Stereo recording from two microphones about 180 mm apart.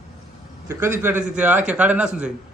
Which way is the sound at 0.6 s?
15° right (ahead or behind).